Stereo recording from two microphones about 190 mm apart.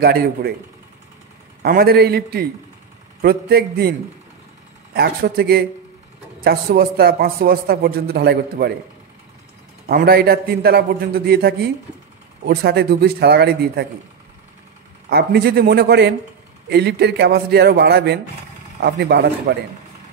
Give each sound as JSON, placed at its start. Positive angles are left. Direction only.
{"t": 0.0, "sound": "a man's voice", "side_deg": -55}
{"t": 1.6, "sound": "a man's voice", "side_deg": -50}
{"t": 4.9, "sound": "a man's voice", "side_deg": -55}
{"t": 9.8, "sound": "a man's voice", "side_deg": -50}
{"t": 15.0, "sound": "a man's voice", "side_deg": -55}